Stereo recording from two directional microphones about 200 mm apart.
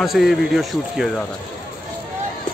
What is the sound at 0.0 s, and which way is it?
Speech, centre (ahead or behind).